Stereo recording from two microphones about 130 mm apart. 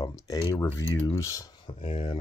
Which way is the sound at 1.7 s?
40° left (ahead or behind).